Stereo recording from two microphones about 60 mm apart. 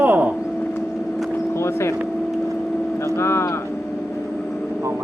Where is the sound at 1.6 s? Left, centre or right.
Left.